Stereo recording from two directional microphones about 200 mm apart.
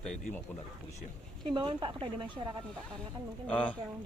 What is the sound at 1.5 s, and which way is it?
Speech, 25° right (ahead or behind).